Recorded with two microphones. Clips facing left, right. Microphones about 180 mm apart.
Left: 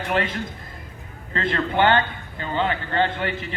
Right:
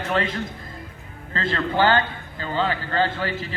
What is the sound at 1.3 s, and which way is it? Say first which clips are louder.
A man's voice: left 1 dB; 35° right (ahead or behind).